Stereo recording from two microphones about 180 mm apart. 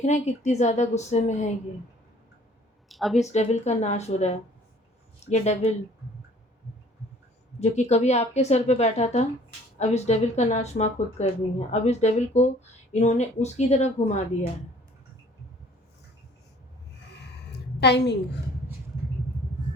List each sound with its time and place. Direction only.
0.0 s a woman's voice: 40° left (ahead or behind)
2.9 s speech: centre (ahead or behind)
3.2 s a woman's voice: 40° left (ahead or behind)
7.6 s a woman's voice: 40° left (ahead or behind)
17.7 s a woman's voice: 70° left (ahead or behind)